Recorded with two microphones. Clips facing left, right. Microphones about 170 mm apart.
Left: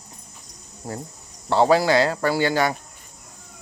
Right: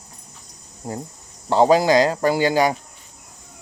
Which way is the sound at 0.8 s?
20° right (ahead or behind).